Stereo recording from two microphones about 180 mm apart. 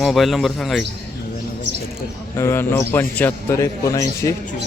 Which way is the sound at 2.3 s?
15° left (ahead or behind).